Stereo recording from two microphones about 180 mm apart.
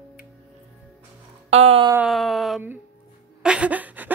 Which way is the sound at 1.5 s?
35° right (ahead or behind).